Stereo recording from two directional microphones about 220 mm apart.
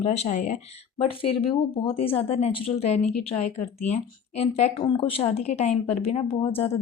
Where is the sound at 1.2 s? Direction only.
25° left (ahead or behind).